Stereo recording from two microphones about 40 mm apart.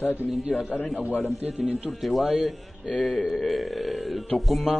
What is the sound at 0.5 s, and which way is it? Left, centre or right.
Speech, left.